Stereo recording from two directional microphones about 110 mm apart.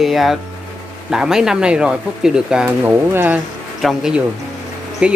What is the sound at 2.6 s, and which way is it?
Speech, 20° right (ahead or behind).